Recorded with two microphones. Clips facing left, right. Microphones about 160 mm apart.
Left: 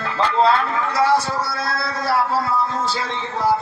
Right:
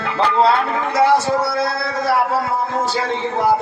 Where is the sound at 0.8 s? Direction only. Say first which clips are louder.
Right 5 dB; 20° right (ahead or behind).